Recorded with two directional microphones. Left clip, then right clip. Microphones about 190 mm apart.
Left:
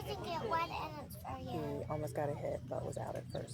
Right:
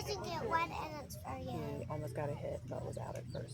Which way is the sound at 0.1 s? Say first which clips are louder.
Even; 15° right (ahead or behind).